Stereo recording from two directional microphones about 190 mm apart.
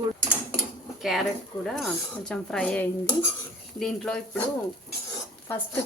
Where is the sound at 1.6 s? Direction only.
Centre (ahead or behind).